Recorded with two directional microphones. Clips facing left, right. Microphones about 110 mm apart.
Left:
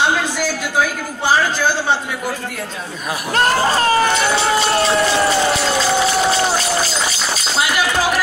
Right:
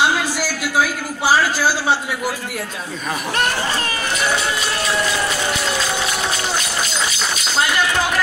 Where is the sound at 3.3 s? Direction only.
35° left (ahead or behind).